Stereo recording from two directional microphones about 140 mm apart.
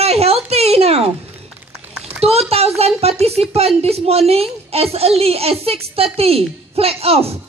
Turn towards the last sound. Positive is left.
turn(degrees=-45)  # may be behind; listen again after turning